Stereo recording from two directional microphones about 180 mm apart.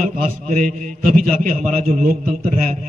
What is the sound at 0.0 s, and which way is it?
A man's voice, 45° right (ahead or behind).